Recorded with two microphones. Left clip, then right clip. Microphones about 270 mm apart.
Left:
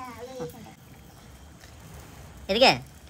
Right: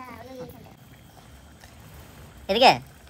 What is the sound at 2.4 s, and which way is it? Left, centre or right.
Speech, centre.